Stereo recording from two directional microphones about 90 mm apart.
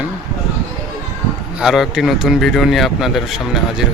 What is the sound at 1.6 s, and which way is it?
Speech, 5° right (ahead or behind).